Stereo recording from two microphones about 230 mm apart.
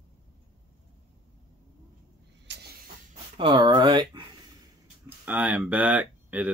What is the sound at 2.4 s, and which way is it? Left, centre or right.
Vehicle, right.